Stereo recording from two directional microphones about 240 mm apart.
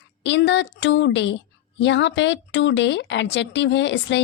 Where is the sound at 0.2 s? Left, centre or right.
Left.